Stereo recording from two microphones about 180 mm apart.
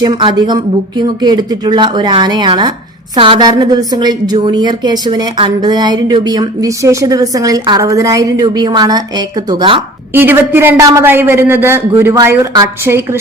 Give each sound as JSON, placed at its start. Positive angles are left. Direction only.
{"t": 0.1, "sound": "a woman's voice", "side_deg": -30}
{"t": 10.1, "sound": "a man's voice", "side_deg": -10}